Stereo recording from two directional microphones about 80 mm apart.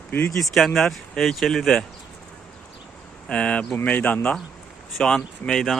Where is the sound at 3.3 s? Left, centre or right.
Centre.